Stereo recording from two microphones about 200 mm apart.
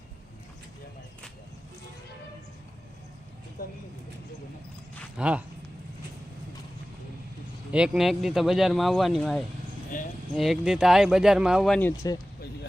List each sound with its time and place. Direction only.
5.1 s speech: 5° right (ahead or behind)
7.7 s speech: 5° right (ahead or behind)
9.9 s a sound: 40° left (ahead or behind)
10.3 s speech: centre (ahead or behind)